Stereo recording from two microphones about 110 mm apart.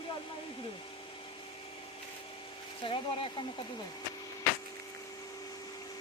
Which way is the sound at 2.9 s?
50° left (ahead or behind).